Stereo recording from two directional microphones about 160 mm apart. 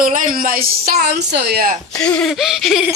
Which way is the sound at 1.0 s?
90° right.